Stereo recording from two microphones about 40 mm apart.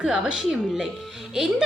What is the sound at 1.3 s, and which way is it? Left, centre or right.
Speech, centre.